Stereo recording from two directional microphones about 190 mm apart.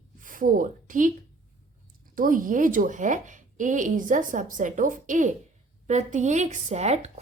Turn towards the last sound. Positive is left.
turn(degrees=-35)  # may be behind; listen again after turning